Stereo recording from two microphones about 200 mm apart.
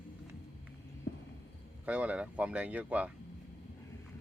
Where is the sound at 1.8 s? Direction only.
5° right (ahead or behind).